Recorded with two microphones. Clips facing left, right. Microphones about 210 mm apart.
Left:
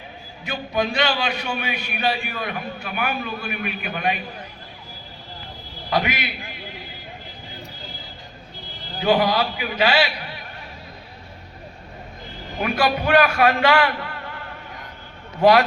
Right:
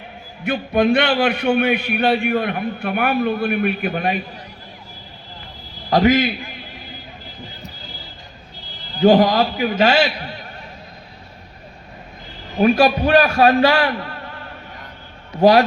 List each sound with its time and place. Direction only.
0.4 s a man's voice: 55° right (ahead or behind); by 4.2 s 40° right (ahead or behind)
5.9 s a man's voice: 40° right (ahead or behind)
9.0 s a man's voice: 45° right (ahead or behind)
12.5 s a man's voice: 30° right (ahead or behind)